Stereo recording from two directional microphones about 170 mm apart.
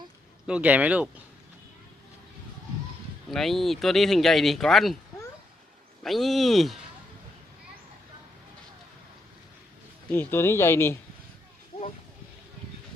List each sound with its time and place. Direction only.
0.4 s speech: 5° right (ahead or behind)
3.2 s speech: centre (ahead or behind)
6.0 s speech: centre (ahead or behind)
10.1 s speech: 15° left (ahead or behind)
11.7 s a sound: 30° left (ahead or behind)